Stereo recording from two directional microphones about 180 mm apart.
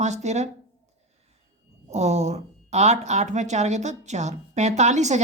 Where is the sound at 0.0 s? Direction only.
40° right (ahead or behind).